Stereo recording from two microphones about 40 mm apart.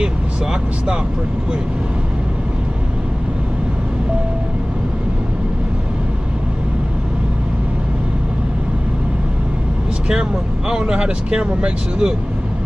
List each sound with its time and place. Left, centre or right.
0.0 s vehicle: right
10.7 s speech: centre